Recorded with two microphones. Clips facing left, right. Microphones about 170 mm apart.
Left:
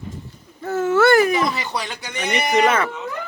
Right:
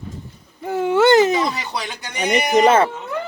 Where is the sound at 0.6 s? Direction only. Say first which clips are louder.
Right 1 dB; 15° right (ahead or behind).